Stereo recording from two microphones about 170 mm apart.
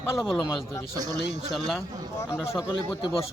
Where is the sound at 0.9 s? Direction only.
20° right (ahead or behind).